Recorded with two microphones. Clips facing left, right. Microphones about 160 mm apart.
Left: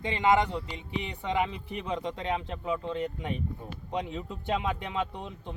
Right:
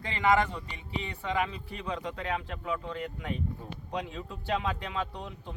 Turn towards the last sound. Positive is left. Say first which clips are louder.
# left 2 dB
turn(degrees=20)  # may be behind; listen again after turning